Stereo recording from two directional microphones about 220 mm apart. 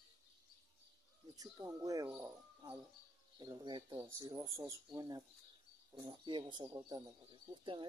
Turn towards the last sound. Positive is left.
turn(degrees=-20)  # may be behind; listen again after turning